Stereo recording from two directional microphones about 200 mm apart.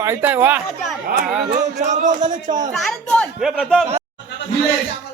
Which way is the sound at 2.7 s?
5° left (ahead or behind).